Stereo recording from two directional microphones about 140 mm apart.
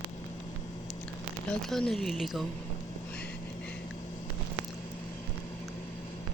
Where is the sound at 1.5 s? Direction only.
5° left (ahead or behind).